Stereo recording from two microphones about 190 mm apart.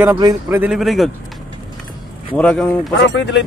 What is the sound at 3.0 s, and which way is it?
Speech, 70° left (ahead or behind).